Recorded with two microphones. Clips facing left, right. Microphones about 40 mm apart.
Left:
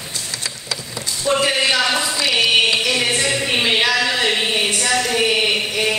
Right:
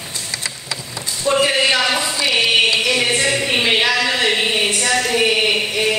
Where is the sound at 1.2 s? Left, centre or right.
Centre.